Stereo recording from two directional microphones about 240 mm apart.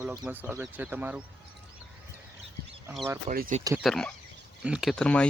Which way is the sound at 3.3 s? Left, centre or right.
Right.